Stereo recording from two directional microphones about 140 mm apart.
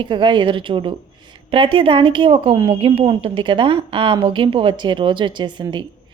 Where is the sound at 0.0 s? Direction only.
35° right (ahead or behind).